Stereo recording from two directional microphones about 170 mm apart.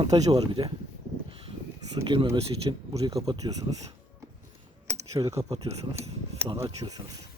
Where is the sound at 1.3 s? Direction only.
35° right (ahead or behind).